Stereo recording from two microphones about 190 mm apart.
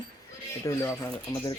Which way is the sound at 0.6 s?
15° left (ahead or behind).